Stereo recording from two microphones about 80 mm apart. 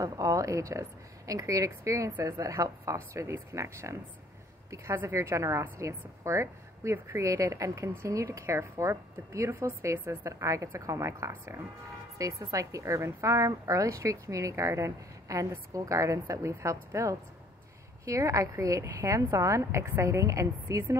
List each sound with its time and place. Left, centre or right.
0.0 s a woman's voice: right